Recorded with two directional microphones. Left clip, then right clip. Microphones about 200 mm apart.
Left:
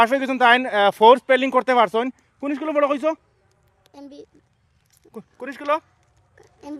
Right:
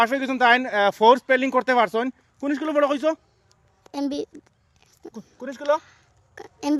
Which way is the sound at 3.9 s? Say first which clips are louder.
Right 14 dB; 55° right (ahead or behind).